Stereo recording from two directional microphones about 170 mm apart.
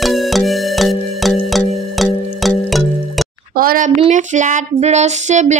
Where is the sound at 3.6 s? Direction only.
55° right (ahead or behind).